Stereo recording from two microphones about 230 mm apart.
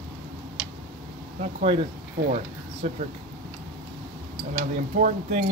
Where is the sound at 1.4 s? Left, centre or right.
Right.